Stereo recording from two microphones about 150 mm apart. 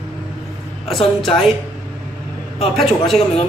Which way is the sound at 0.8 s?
Centre (ahead or behind).